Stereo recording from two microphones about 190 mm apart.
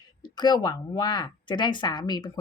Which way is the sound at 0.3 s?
20° left (ahead or behind).